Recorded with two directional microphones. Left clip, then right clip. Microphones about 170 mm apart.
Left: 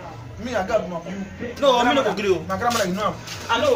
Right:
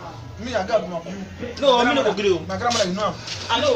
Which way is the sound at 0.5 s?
20° left (ahead or behind).